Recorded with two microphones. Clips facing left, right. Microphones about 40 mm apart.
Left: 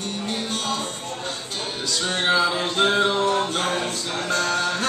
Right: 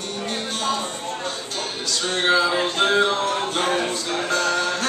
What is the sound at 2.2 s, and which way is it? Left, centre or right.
Speech, centre.